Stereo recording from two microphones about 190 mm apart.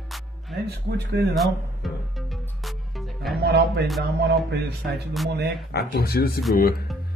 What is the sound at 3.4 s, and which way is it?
A man's voice, 60° right (ahead or behind).